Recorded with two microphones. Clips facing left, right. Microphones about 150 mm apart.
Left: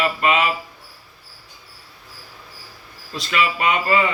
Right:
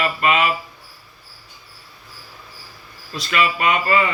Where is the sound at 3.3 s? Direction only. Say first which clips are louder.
Right 1 dB; 25° left (ahead or behind).